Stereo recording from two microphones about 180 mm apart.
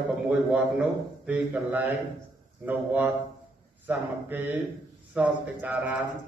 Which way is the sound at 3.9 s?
10° right (ahead or behind).